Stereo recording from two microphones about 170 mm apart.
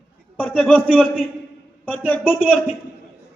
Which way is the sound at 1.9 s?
10° left (ahead or behind).